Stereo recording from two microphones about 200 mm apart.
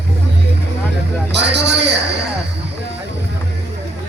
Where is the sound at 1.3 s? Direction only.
60° right (ahead or behind).